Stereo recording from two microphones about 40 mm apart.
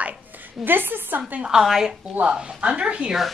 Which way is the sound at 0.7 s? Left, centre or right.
Right.